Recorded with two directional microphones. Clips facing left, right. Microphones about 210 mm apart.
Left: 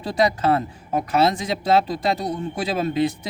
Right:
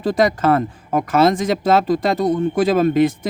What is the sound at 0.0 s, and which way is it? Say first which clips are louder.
Speech: right 4 dB; 50° right (ahead or behind).